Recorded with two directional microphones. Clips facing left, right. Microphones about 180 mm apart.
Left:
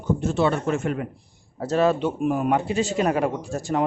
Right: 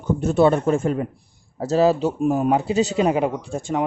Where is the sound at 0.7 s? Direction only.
30° right (ahead or behind).